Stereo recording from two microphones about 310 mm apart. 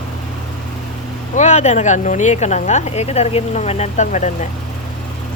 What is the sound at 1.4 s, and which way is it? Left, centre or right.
Speech, left.